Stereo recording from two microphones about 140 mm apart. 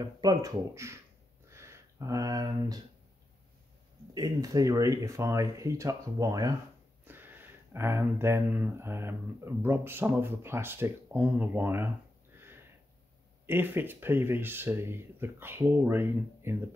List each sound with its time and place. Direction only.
0.0 s speech: 30° right (ahead or behind)
1.5 s a sound: 20° right (ahead or behind)
4.1 s speech: 25° right (ahead or behind)
7.1 s speech: 15° right (ahead or behind)
12.4 s sniff: 15° right (ahead or behind)
13.5 s speech: 15° right (ahead or behind)